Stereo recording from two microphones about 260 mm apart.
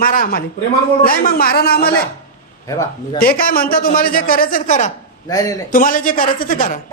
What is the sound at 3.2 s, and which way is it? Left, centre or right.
A man's voice, left.